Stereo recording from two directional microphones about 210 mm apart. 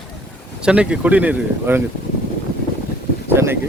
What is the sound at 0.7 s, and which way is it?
Speech, 5° right (ahead or behind).